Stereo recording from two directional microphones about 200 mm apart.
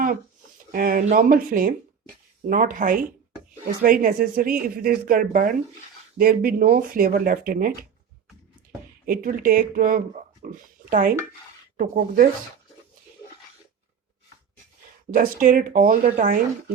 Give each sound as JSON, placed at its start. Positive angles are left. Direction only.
{"t": 0.7, "sound": "speech", "side_deg": -45}
{"t": 9.0, "sound": "speech", "side_deg": -45}
{"t": 15.1, "sound": "speech", "side_deg": -45}